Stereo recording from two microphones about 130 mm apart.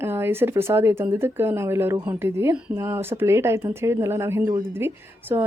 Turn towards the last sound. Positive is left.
turn(degrees=-20)  # may be behind; listen again after turning